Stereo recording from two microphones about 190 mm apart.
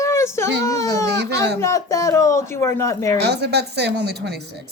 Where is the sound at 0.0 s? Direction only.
15° left (ahead or behind).